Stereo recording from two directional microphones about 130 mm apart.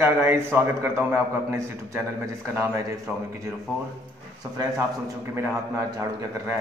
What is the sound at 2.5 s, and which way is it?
Speech, 20° right (ahead or behind).